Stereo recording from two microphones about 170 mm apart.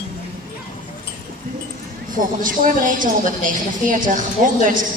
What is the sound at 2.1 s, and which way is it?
A woman's voice, 55° right (ahead or behind).